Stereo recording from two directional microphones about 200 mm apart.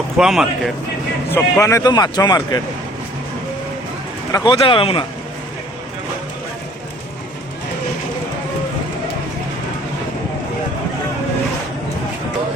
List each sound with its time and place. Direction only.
0.2 s speech: centre (ahead or behind)
1.3 s speech: 10° left (ahead or behind)
4.3 s speech: 20° left (ahead or behind)